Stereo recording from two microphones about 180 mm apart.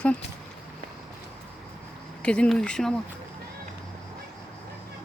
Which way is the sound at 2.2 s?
5° left (ahead or behind).